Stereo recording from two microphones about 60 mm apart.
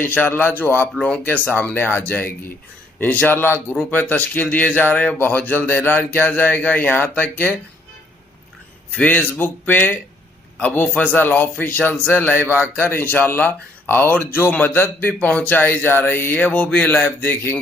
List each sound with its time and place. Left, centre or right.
0.0 s speech: left
3.3 s speech: left
3.7 s speech: left
8.9 s speech: left